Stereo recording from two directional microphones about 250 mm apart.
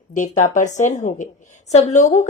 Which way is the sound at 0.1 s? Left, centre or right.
Left.